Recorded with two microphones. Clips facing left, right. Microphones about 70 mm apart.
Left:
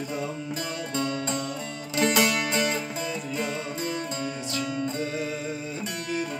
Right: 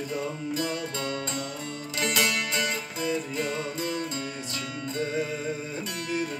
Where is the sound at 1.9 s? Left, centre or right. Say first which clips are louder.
Left 4 dB; left.